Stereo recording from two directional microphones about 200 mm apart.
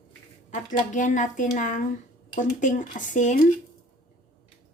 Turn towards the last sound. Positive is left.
turn(degrees=40)  # may be behind; listen again after turning